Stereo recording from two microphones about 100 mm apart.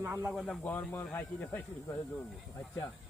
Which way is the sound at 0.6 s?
20° left (ahead or behind).